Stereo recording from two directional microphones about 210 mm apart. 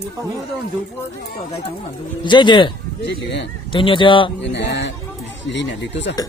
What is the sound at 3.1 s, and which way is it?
Speech, 55° left (ahead or behind).